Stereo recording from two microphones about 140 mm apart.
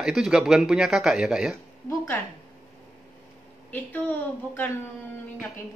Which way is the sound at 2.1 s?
15° left (ahead or behind).